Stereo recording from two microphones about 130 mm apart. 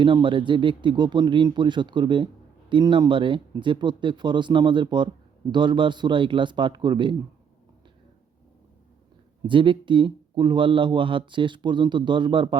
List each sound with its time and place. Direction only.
0.0 s speech: 40° right (ahead or behind)
9.5 s speech: 40° right (ahead or behind)